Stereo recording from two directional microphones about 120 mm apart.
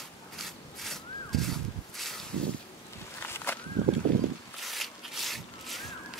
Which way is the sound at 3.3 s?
15° left (ahead or behind).